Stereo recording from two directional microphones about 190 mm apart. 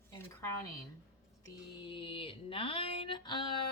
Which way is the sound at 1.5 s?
25° left (ahead or behind).